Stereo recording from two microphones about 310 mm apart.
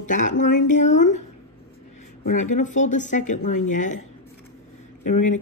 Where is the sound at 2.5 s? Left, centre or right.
Left.